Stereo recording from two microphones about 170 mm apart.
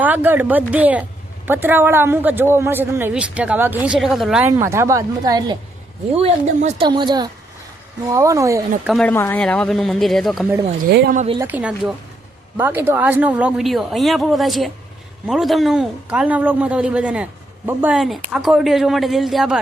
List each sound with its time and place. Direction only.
0.0 s speech: 10° right (ahead or behind)
6.1 s speech: 40° right (ahead or behind)
6.8 s speech: 25° right (ahead or behind)
8.9 s speech: 5° left (ahead or behind)
9.1 s speech: 15° left (ahead or behind)
10.8 s speech: 70° right (ahead or behind)
11.3 s speech: 10° right (ahead or behind)